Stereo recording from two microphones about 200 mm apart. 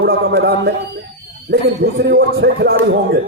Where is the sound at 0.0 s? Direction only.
55° right (ahead or behind).